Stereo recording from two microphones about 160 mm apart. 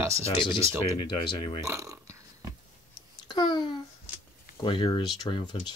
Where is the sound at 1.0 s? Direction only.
30° left (ahead or behind).